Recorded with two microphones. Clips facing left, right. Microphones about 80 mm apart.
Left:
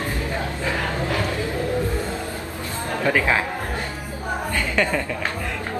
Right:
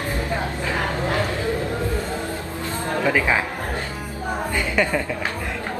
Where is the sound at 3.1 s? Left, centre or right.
Centre.